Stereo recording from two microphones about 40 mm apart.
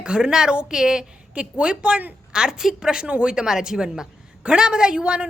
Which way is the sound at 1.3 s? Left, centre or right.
Right.